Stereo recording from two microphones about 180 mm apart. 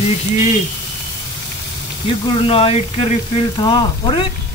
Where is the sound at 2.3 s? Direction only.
30° left (ahead or behind).